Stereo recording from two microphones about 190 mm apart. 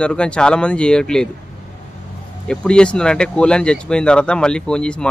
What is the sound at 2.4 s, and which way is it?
Speech, 5° left (ahead or behind).